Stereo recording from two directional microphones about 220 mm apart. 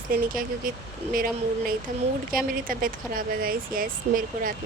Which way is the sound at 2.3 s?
40° right (ahead or behind).